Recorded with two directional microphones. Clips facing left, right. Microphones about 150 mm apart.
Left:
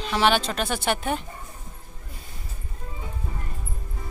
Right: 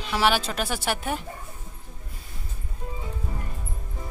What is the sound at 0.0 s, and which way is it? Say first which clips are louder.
Speech: left 2 dB; 5° right (ahead or behind).